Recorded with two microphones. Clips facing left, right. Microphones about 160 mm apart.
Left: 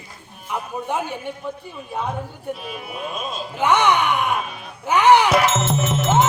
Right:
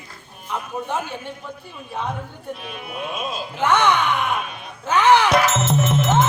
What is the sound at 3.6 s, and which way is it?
Speech, 15° left (ahead or behind).